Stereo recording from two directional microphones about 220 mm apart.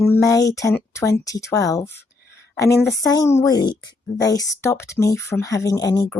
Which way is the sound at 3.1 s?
15° left (ahead or behind).